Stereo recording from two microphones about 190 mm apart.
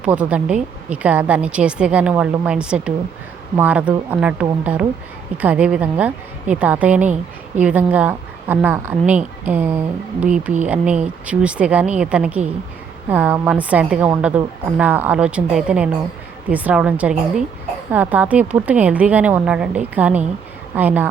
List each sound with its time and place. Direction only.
0.0 s a woman's voice: 5° right (ahead or behind)